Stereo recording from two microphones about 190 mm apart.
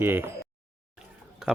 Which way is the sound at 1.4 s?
5° right (ahead or behind).